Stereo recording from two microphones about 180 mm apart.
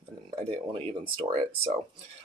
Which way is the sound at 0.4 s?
35° right (ahead or behind).